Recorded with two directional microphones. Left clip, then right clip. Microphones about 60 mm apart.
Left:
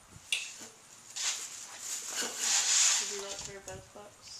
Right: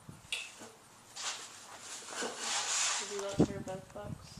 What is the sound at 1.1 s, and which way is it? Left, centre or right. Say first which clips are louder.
Dog: left 5 dB; left.